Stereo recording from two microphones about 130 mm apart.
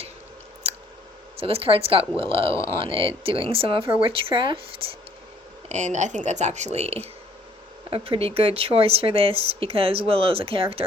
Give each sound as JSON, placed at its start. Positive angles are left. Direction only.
{"t": 1.4, "sound": "speech", "side_deg": -45}
{"t": 5.6, "sound": "speech", "side_deg": -65}